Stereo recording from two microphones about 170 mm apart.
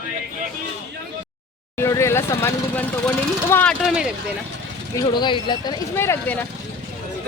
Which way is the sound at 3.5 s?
10° left (ahead or behind).